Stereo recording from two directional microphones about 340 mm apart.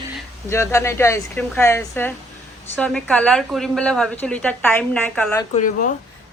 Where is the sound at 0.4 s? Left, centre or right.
Centre.